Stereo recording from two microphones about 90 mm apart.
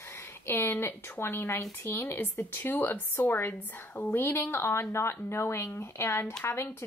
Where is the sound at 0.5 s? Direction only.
30° left (ahead or behind).